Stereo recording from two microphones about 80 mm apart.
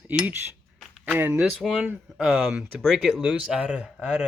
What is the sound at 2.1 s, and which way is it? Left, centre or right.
Speech, centre.